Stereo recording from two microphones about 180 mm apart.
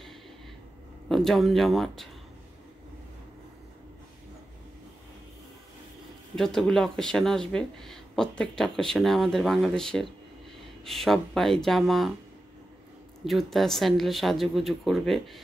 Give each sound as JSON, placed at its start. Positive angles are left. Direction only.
{"t": 1.0, "sound": "speech", "side_deg": 0}
{"t": 6.3, "sound": "speech", "side_deg": 0}
{"t": 13.2, "sound": "speech", "side_deg": 0}